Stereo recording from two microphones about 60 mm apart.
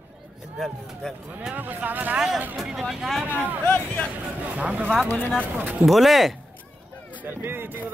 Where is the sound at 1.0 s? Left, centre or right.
Centre.